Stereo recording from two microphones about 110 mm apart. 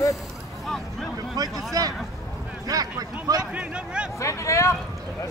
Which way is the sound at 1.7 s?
35° right (ahead or behind).